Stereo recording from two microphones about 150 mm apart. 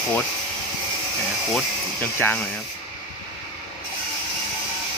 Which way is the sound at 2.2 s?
10° left (ahead or behind).